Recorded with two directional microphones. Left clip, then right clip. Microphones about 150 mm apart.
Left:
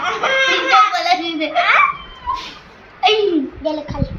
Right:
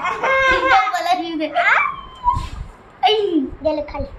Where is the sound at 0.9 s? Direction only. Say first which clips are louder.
Left 2 dB; 25° right (ahead or behind).